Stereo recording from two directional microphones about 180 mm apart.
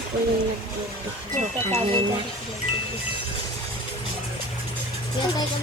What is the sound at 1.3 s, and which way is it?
Speech, 35° right (ahead or behind).